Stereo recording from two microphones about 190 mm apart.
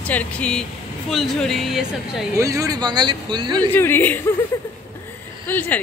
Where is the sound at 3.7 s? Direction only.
10° left (ahead or behind).